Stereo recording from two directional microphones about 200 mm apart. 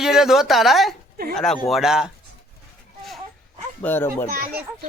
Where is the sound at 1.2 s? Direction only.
50° right (ahead or behind).